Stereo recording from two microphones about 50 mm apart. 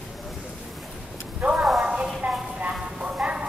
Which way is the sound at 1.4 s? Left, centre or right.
Centre.